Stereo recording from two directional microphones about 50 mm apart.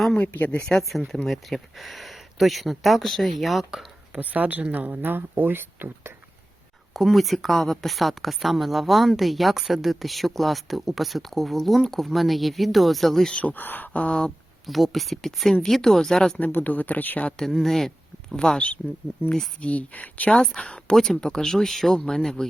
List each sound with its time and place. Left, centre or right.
0.2 s speech: left
0.6 s a woman's voice: centre
4.1 s speech: right
6.9 s a woman's voice: centre
13.4 s speech: left
14.7 s a woman's voice: centre
16.4 s speech: left
17.3 s speech: centre
18.3 s speech: centre
19.6 s speech: left
20.6 s speech: left
20.9 s speech: centre